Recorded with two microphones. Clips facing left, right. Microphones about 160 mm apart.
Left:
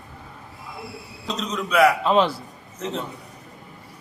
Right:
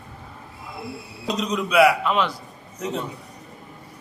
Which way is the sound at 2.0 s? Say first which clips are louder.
Left 4 dB; 30° left (ahead or behind).